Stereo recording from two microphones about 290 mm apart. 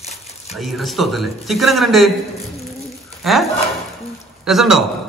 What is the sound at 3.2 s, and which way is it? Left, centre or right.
Speech, centre.